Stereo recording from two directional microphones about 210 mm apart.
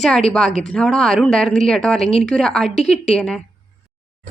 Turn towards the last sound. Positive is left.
turn(degrees=30)  # may be behind; listen again after turning